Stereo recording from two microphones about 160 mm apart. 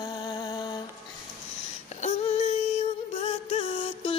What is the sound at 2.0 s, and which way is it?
Music, 40° left (ahead or behind).